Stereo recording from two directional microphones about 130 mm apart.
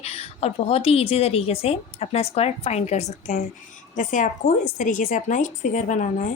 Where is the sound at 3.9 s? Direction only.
80° left.